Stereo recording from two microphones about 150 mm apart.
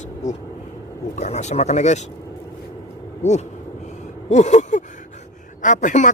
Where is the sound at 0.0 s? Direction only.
55° left (ahead or behind).